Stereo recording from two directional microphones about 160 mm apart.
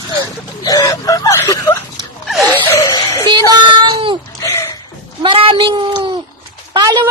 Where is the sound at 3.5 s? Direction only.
30° right (ahead or behind).